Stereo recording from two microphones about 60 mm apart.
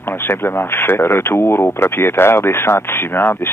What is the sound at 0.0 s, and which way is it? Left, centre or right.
Speech, left.